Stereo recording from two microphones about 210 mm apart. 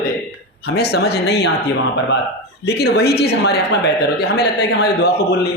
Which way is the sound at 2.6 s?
50° left (ahead or behind).